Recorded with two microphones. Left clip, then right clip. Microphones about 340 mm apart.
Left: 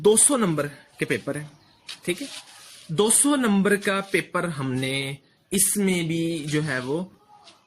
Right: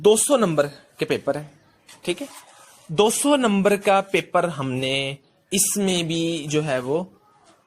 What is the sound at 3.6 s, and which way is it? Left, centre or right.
Speech, right.